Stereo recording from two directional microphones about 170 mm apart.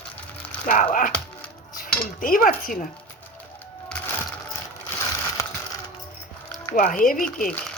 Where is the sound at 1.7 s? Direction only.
55° left (ahead or behind).